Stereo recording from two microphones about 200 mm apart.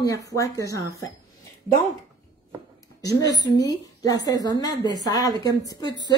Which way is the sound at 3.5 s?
20° left (ahead or behind).